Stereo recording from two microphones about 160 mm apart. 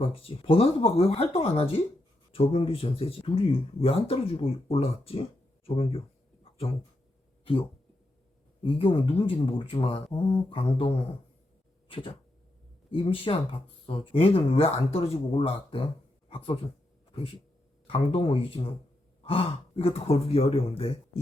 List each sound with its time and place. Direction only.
0.0 s speech: 35° left (ahead or behind)
5.6 s a sound: 35° left (ahead or behind)
8.6 s speech: 35° left (ahead or behind)
11.9 s a sound: 35° left (ahead or behind)
12.9 s speech: 35° left (ahead or behind)
17.8 s speech: 35° left (ahead or behind)